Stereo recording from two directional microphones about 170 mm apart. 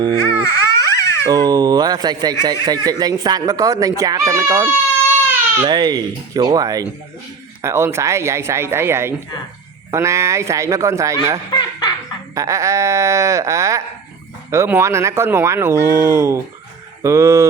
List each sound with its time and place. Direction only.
0.4 s a sound: 20° left (ahead or behind)
1.2 s speech: 20° right (ahead or behind)
11.5 s laughter: 25° left (ahead or behind)
12.3 s sheep: 20° right (ahead or behind)
14.5 s speech: 15° right (ahead or behind)